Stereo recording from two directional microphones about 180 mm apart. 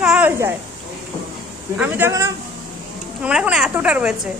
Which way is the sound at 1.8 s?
10° right (ahead or behind).